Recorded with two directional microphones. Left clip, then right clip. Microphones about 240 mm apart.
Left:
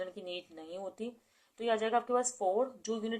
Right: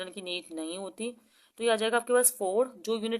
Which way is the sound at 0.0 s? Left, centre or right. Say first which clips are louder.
Right 4 dB; right.